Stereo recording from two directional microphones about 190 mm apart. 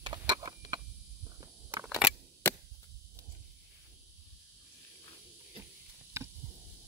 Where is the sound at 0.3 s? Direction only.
20° right (ahead or behind).